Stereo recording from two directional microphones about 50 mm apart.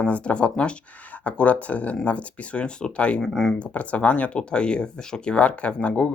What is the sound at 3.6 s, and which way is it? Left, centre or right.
Speech, left.